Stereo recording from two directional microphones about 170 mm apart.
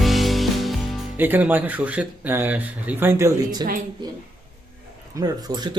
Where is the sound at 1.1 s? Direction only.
10° right (ahead or behind).